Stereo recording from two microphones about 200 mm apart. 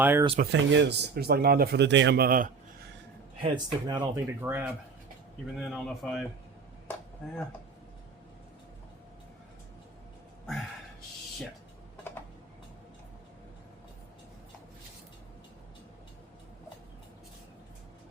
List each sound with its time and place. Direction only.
0.0 s speech: 10° right (ahead or behind)
0.5 s speech: 60° right (ahead or behind); by 2.5 s 45° right (ahead or behind)
3.4 s speech: 25° right (ahead or behind)
5.5 s speech: centre (ahead or behind)